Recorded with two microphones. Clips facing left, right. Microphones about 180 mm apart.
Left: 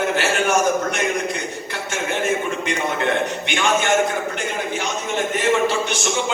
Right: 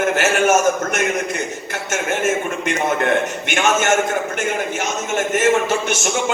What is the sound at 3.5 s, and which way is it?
Speech, 45° right (ahead or behind).